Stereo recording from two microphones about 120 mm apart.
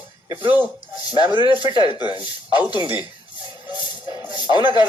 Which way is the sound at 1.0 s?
35° left (ahead or behind).